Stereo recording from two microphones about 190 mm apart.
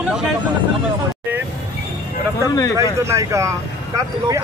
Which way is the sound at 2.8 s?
15° right (ahead or behind).